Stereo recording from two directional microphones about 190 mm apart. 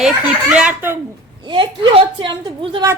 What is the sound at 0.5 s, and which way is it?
Speech, 10° right (ahead or behind).